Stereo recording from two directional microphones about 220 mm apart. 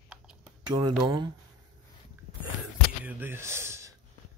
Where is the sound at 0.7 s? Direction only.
20° right (ahead or behind).